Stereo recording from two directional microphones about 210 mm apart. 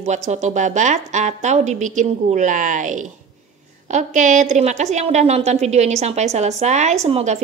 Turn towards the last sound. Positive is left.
turn(degrees=-30)  # may be behind; listen again after turning